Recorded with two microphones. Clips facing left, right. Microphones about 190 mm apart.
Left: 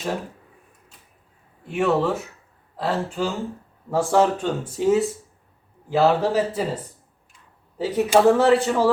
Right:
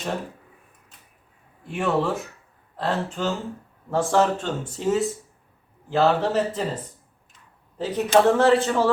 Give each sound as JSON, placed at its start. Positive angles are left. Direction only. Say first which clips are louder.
{"t": 1.6, "sound": "speech", "louder": "left 3 dB", "side_deg": 5}
{"t": 7.8, "sound": "speech", "louder": "left 1 dB", "side_deg": 5}